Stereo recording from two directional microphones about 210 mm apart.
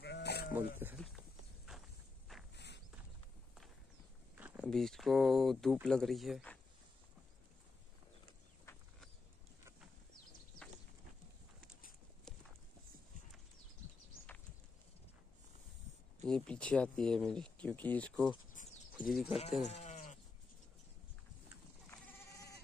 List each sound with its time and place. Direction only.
0.0 s sheep: 50° left (ahead or behind)
0.5 s speech: 10° right (ahead or behind)
1.7 s walk: centre (ahead or behind)
2.5 s horse: 55° left (ahead or behind)
4.4 s speech: 5° right (ahead or behind)
16.3 s speech: 5° left (ahead or behind)
18.5 s a sound: 35° left (ahead or behind)
18.9 s speech: centre (ahead or behind)
19.6 s goat: 35° left (ahead or behind)